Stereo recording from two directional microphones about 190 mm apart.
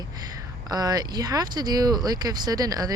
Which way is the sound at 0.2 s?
20° right (ahead or behind).